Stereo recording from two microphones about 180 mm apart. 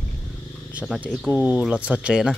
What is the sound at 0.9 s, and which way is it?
Speech, 10° right (ahead or behind).